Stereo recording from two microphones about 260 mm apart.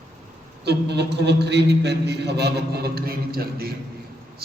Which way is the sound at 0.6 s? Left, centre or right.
Right.